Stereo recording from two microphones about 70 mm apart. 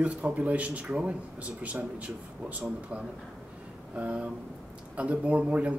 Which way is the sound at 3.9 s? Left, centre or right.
Centre.